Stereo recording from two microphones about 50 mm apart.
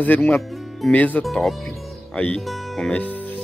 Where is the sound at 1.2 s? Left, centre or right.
Centre.